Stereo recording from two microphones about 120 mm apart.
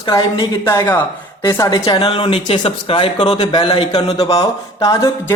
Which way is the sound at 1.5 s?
30° left (ahead or behind).